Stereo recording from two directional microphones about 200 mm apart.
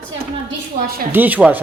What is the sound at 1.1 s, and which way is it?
Speech, 10° right (ahead or behind).